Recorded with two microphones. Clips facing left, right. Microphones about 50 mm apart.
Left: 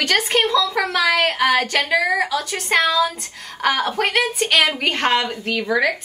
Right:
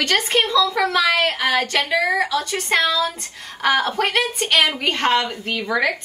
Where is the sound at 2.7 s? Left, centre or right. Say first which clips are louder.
Left 3 dB; centre.